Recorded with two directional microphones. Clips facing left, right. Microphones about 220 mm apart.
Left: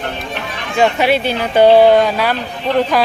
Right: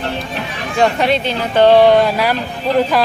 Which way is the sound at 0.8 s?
5° left (ahead or behind).